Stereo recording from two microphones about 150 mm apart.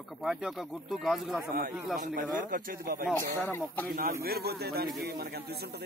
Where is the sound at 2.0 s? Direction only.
65° right (ahead or behind).